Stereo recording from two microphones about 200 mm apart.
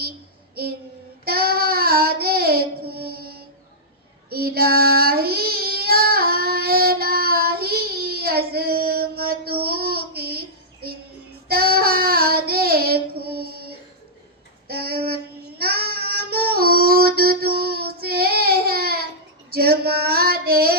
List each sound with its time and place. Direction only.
1.2 s child singing: 50° right (ahead or behind)
11.4 s child singing: 50° right (ahead or behind)